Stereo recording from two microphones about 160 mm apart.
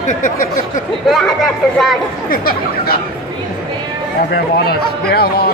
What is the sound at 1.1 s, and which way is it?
Speech, centre (ahead or behind).